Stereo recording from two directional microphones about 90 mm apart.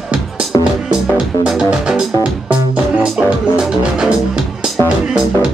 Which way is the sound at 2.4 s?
10° right (ahead or behind).